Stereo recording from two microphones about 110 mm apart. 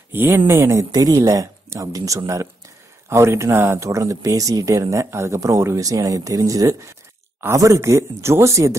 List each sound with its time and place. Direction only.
0.1 s speech: 20° right (ahead or behind)